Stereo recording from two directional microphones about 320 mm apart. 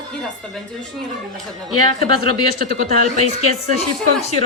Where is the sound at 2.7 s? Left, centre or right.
Right.